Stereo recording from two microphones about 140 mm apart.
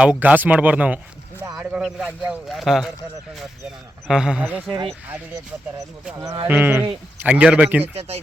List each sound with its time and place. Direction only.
0.0 s speech: 10° right (ahead or behind)
4.1 s speech: 5° right (ahead or behind)
6.5 s speech: 15° right (ahead or behind)
7.9 s speech: 45° right (ahead or behind)